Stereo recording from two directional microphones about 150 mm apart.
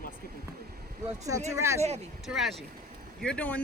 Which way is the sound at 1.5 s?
20° right (ahead or behind).